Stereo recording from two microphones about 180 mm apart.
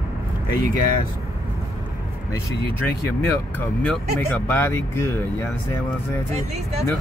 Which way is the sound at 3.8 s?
10° left (ahead or behind).